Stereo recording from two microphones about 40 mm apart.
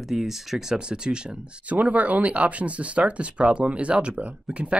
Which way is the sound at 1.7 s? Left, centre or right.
Right.